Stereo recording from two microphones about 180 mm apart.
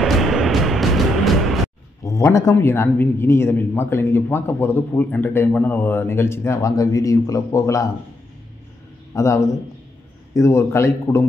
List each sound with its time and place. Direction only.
0.0 s music: centre (ahead or behind)
2.0 s speech: 15° left (ahead or behind)
9.1 s speech: 15° left (ahead or behind)